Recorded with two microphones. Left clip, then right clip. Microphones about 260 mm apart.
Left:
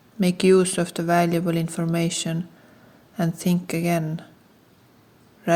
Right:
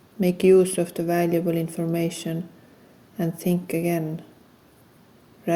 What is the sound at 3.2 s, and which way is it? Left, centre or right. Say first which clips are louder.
Speech: even; left.